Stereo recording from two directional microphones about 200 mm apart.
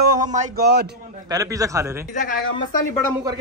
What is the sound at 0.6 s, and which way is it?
Speech, 50° right (ahead or behind).